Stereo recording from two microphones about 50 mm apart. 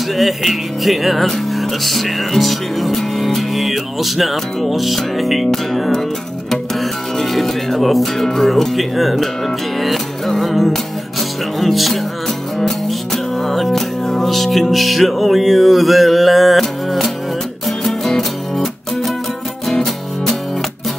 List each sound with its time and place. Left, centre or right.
0.1 s music: centre
6.5 s speech: centre
9.8 s music: centre